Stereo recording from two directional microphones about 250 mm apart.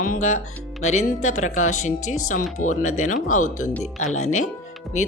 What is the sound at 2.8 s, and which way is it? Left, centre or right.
Speech, left.